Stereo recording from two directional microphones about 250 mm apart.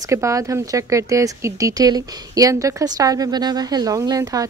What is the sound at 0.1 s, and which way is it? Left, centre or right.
Speech, centre.